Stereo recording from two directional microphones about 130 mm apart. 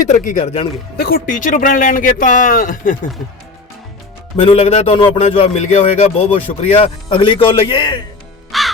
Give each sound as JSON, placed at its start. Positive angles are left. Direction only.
{"t": 0.0, "sound": "speech", "side_deg": 70}
{"t": 1.3, "sound": "speech", "side_deg": 90}
{"t": 4.4, "sound": "a man's voice", "side_deg": 45}
{"t": 8.5, "sound": "crow", "side_deg": 0}